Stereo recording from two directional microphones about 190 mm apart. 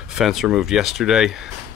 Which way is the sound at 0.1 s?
Centre (ahead or behind).